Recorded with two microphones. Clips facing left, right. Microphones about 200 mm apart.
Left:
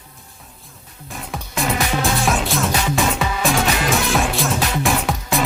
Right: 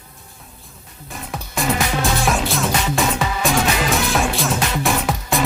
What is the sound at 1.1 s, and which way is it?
Music, centre (ahead or behind).